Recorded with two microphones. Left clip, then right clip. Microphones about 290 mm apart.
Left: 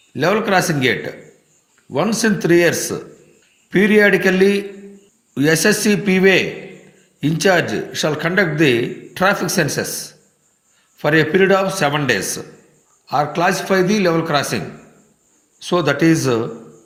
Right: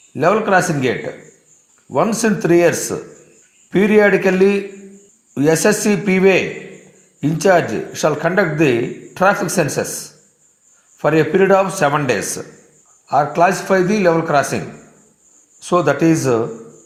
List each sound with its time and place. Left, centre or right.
0.1 s speech: centre
15.6 s speech: centre